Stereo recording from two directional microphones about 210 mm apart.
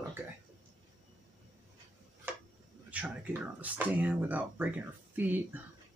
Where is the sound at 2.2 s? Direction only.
10° right (ahead or behind).